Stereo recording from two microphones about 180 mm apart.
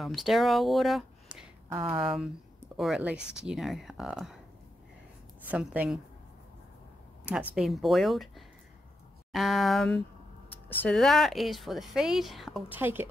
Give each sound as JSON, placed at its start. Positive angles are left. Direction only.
{"t": 0.0, "sound": "speech", "side_deg": 0}
{"t": 1.8, "sound": "speech", "side_deg": -30}
{"t": 2.8, "sound": "speech", "side_deg": -5}
{"t": 5.5, "sound": "a woman's voice", "side_deg": -10}
{"t": 7.2, "sound": "speech", "side_deg": -5}